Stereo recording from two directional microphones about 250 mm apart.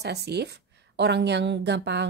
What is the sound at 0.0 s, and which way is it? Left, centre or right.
Speech, right.